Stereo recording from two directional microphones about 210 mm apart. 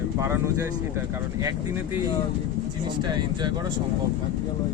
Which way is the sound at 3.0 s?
20° right (ahead or behind).